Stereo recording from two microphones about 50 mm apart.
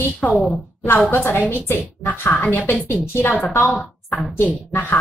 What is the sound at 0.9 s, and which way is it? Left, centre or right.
A woman's voice, left.